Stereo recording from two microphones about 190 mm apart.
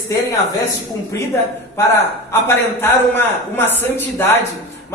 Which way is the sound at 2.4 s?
10° left (ahead or behind).